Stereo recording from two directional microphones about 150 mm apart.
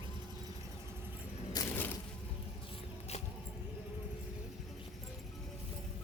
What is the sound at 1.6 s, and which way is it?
Music, 25° left (ahead or behind).